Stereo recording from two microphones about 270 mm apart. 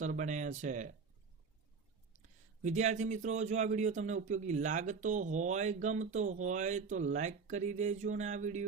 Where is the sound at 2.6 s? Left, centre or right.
Right.